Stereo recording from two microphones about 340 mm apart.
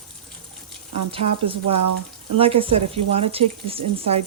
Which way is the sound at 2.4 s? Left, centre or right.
Centre.